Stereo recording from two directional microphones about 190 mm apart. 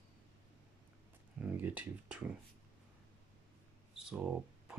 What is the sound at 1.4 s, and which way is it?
Speech, 10° right (ahead or behind).